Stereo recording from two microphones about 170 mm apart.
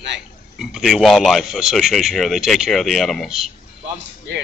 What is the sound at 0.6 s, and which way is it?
A man's voice, centre (ahead or behind).